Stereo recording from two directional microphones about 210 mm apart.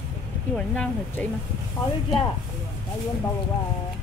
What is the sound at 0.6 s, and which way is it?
Speech, 5° left (ahead or behind).